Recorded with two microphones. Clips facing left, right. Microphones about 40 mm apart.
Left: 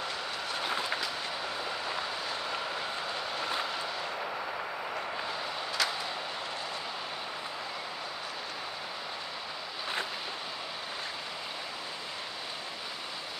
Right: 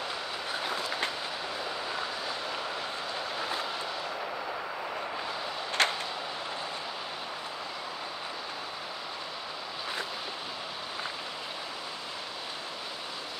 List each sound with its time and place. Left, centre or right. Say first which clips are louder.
5.8 s vehicle: right 5 dB; right